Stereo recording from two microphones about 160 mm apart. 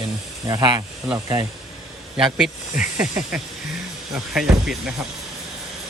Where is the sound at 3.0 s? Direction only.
10° right (ahead or behind).